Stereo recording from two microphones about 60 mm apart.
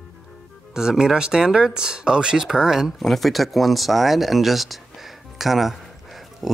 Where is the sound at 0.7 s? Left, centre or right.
Centre.